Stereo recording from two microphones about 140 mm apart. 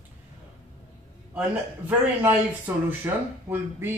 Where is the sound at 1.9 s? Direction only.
15° right (ahead or behind).